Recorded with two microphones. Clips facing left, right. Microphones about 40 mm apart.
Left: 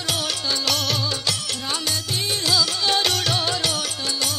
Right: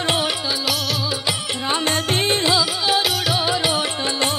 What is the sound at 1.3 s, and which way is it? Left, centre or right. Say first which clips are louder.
Music: right 4 dB; right.